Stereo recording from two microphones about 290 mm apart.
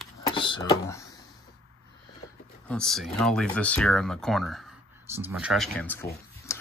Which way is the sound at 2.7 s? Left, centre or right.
Centre.